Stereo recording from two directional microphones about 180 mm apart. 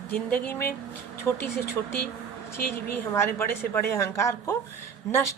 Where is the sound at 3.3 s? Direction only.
15° left (ahead or behind).